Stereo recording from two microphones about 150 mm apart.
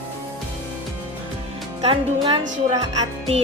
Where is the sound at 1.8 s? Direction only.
35° right (ahead or behind).